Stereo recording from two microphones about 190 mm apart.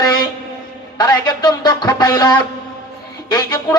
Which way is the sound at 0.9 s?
20° left (ahead or behind).